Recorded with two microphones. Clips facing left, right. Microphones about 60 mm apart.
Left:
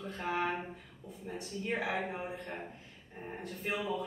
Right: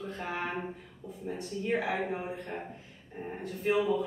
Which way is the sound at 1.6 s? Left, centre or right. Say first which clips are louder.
Right 4 dB; centre.